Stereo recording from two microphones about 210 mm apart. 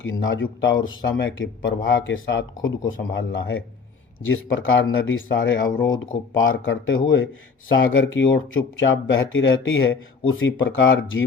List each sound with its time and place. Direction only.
0.0 s speech: 65° left (ahead or behind)
5.6 s speech: 20° left (ahead or behind)
6.3 s speech: 70° left (ahead or behind)